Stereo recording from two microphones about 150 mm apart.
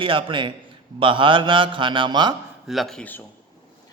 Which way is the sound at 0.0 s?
35° right (ahead or behind).